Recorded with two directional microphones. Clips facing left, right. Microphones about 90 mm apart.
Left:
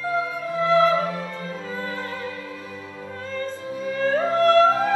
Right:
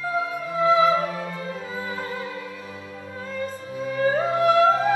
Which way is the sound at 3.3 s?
10° right (ahead or behind).